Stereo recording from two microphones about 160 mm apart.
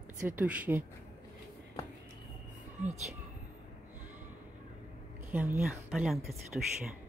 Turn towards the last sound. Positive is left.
turn(degrees=0)  # may be behind; listen again after turning